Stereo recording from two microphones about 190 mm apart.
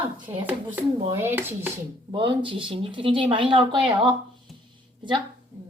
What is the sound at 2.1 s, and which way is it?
Speech, 25° right (ahead or behind).